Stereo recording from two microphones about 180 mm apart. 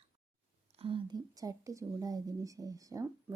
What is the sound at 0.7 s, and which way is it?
Speech, 30° right (ahead or behind).